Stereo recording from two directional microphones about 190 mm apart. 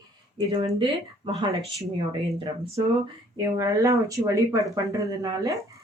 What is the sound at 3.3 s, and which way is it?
Speech, 15° right (ahead or behind).